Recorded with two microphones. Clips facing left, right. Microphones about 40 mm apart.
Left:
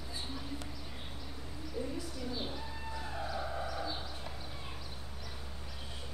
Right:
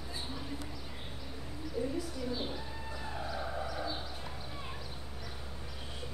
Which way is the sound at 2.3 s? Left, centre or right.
Centre.